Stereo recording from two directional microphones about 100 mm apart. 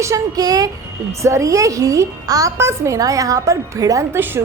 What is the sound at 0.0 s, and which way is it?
A woman's voice, 35° right (ahead or behind).